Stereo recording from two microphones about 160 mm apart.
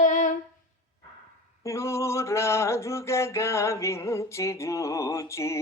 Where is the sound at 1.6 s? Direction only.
20° left (ahead or behind).